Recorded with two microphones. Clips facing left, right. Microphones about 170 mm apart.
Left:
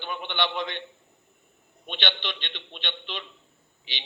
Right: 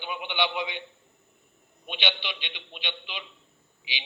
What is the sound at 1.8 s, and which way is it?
A man's voice, 10° right (ahead or behind).